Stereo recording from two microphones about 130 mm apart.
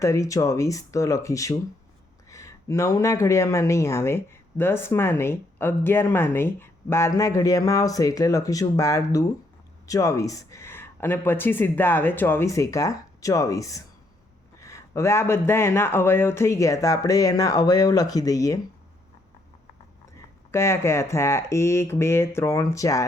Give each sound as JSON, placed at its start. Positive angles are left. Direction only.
{"t": 0.0, "sound": "speech", "side_deg": 25}
{"t": 20.5, "sound": "speech", "side_deg": 20}